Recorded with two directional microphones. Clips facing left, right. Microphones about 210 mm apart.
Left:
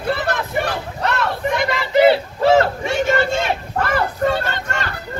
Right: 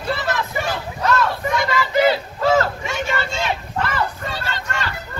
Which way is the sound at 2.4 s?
25° left (ahead or behind).